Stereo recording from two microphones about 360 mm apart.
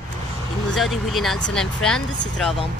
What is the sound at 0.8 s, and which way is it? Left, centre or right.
Speech, centre.